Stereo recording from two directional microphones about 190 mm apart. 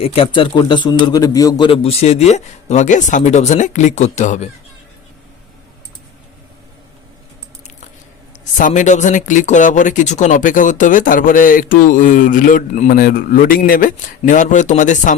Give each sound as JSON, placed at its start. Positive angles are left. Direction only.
{"t": 0.0, "sound": "a man's voice", "side_deg": 30}
{"t": 8.5, "sound": "speech", "side_deg": 40}